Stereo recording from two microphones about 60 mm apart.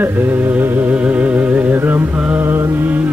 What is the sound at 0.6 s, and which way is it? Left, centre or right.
Music, right.